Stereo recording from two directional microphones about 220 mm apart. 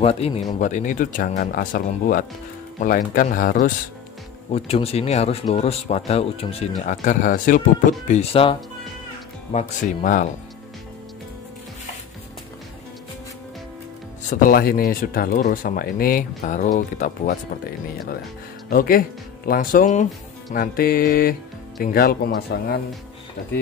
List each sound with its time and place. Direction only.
0.0 s speech: 25° left (ahead or behind)
4.5 s speech: 25° left (ahead or behind)
8.1 s speech: 25° left (ahead or behind)
14.3 s speech: 40° left (ahead or behind)
18.7 s speech: 40° left (ahead or behind)